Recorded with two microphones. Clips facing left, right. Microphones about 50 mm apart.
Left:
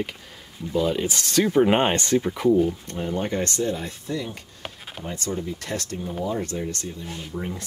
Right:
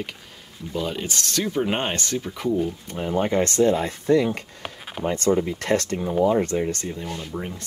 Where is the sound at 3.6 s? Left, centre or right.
Right.